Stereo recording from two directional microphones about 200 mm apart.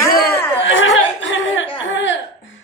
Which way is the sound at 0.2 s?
60° left (ahead or behind).